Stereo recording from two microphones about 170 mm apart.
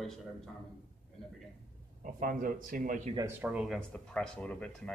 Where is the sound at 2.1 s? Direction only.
55° right (ahead or behind).